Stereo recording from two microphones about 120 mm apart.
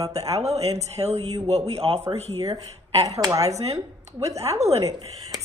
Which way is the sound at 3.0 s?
30° right (ahead or behind).